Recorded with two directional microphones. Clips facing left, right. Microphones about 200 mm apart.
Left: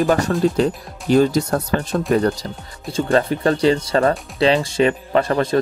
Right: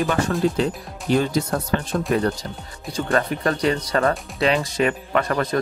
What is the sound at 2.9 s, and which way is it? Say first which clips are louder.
Speech: left 4 dB; 30° left (ahead or behind).